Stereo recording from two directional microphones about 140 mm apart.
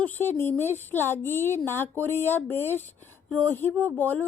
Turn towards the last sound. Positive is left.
turn(degrees=10)  # may be behind; listen again after turning